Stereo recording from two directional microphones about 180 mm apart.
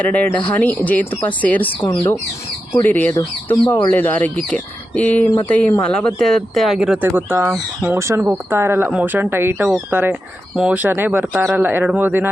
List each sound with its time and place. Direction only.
0.0 s speech: 10° left (ahead or behind)
7.9 s speech: 15° right (ahead or behind)